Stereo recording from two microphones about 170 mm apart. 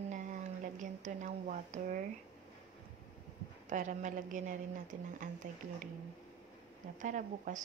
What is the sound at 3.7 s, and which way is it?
A woman's voice, 45° right (ahead or behind).